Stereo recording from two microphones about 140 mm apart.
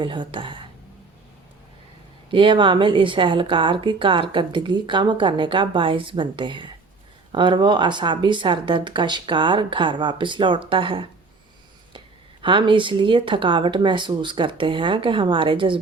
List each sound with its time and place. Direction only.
0.0 s speech: 35° right (ahead or behind)
2.3 s speech: 35° right (ahead or behind)